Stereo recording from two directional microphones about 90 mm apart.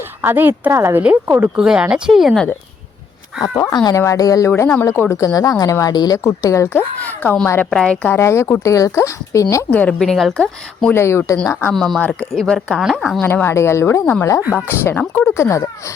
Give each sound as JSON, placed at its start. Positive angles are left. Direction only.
{"t": 0.2, "sound": "a woman's voice", "side_deg": -25}
{"t": 1.5, "sound": "speech", "side_deg": -10}
{"t": 3.8, "sound": "speech", "side_deg": 35}
{"t": 4.5, "sound": "speech", "side_deg": 25}
{"t": 7.0, "sound": "a sound", "side_deg": 20}
{"t": 7.7, "sound": "speech", "side_deg": 5}
{"t": 8.0, "sound": "speech", "side_deg": 30}
{"t": 9.6, "sound": "speech", "side_deg": 15}
{"t": 10.0, "sound": "speech", "side_deg": 0}
{"t": 10.9, "sound": "speech", "side_deg": 30}
{"t": 11.7, "sound": "speech", "side_deg": 5}
{"t": 11.9, "sound": "speech", "side_deg": 15}
{"t": 12.3, "sound": "speech", "side_deg": 0}
{"t": 13.2, "sound": "speech", "side_deg": 25}